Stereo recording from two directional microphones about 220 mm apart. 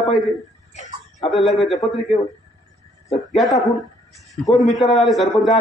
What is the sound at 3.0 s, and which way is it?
A man's voice, centre (ahead or behind).